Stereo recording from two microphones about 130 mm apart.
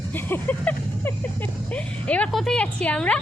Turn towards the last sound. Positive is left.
turn(degrees=10)  # may be behind; listen again after turning